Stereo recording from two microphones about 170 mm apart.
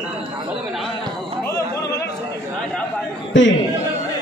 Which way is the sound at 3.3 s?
90° left.